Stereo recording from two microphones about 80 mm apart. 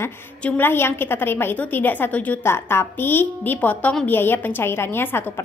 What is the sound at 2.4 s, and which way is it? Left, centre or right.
A woman's voice, left.